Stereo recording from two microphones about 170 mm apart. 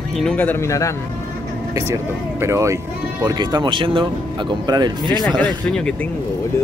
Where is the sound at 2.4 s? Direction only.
15° right (ahead or behind).